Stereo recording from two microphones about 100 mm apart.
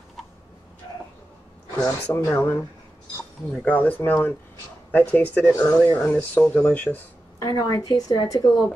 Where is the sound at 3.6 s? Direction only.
15° left (ahead or behind).